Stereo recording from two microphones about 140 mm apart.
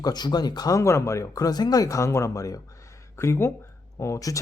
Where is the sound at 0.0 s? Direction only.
30° left (ahead or behind).